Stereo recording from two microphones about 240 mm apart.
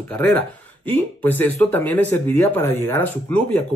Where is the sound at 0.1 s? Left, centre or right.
Centre.